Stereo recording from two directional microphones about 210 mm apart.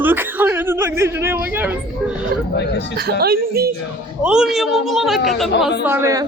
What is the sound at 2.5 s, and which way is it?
Speech, 55° left (ahead or behind).